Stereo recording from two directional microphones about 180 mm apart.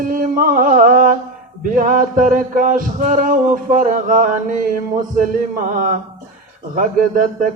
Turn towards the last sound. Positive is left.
turn(degrees=-50)  # may be behind; listen again after turning